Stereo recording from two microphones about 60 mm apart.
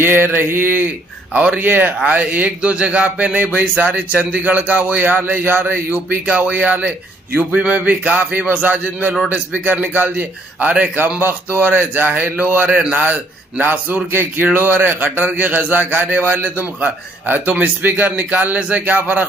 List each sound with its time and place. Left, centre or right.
0.0 s a man's voice: right